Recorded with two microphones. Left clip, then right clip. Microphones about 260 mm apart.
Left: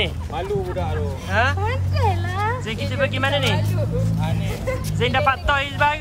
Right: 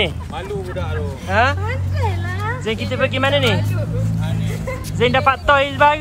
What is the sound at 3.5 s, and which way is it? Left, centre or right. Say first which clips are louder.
Music: even; left.